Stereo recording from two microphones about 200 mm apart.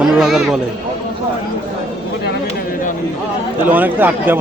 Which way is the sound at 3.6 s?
10° right (ahead or behind).